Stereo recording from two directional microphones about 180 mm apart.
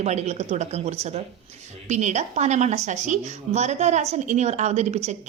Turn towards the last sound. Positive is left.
turn(degrees=-40)  # may be behind; listen again after turning